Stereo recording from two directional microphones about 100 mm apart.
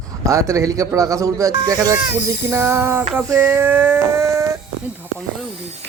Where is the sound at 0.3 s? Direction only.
30° right (ahead or behind).